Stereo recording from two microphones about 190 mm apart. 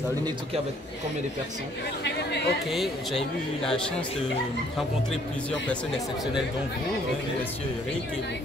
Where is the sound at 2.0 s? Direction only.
65° left (ahead or behind).